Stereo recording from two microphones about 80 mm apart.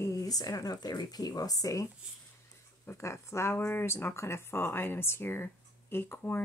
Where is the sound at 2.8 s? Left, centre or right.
Left.